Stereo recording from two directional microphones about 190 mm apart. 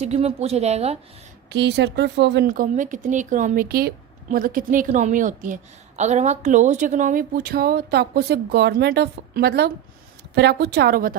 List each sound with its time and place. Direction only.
0.0 s a woman's voice: 35° right (ahead or behind)
1.5 s speech: 65° right (ahead or behind)
2.5 s a woman's voice: 45° right (ahead or behind)